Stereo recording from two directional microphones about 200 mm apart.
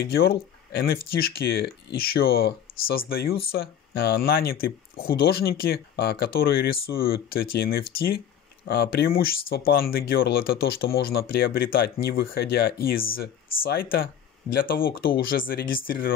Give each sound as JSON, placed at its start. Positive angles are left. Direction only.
{"t": 0.0, "sound": "speech", "side_deg": 50}